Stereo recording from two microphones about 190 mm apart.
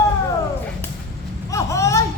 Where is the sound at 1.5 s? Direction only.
15° left (ahead or behind).